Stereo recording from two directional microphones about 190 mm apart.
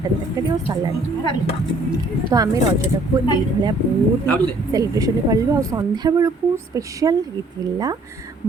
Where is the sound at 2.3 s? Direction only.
15° right (ahead or behind).